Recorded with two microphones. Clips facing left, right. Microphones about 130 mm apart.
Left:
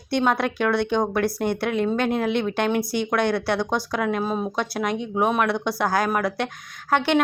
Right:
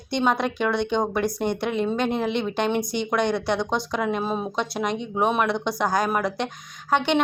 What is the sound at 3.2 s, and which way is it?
Speech, 20° right (ahead or behind).